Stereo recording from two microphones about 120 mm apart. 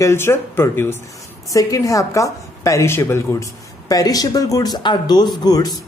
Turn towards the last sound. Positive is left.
turn(degrees=35)  # may be behind; listen again after turning